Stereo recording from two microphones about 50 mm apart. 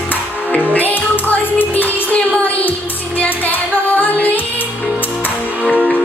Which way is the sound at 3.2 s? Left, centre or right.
Left.